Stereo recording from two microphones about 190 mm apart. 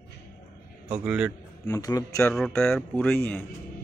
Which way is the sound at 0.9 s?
5° right (ahead or behind).